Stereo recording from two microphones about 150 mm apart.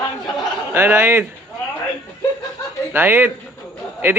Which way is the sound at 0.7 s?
15° right (ahead or behind).